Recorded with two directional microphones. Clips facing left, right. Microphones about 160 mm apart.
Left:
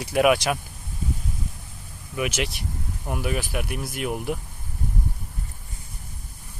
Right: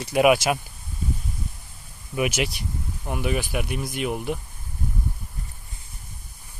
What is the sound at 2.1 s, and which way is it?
Speech, 15° right (ahead or behind).